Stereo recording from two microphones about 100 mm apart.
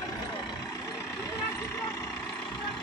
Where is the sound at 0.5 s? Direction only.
30° left (ahead or behind).